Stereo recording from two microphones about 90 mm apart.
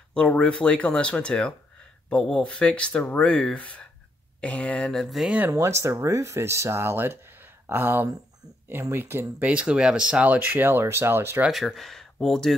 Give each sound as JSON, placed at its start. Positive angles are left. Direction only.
{"t": 0.1, "sound": "speech", "side_deg": 10}
{"t": 5.5, "sound": "speech", "side_deg": -35}
{"t": 11.4, "sound": "speech", "side_deg": 0}